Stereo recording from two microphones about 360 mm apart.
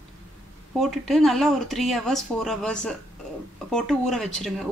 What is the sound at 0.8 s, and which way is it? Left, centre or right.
Speech, centre.